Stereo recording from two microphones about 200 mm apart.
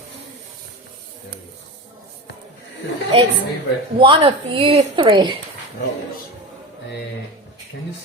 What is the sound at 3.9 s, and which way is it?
A woman's voice, 25° right (ahead or behind).